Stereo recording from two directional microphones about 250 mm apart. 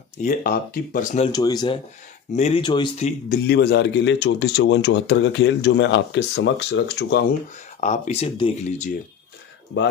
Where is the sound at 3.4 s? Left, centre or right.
Left.